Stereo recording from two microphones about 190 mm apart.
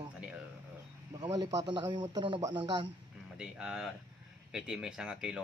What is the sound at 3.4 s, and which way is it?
Speech, 5° right (ahead or behind).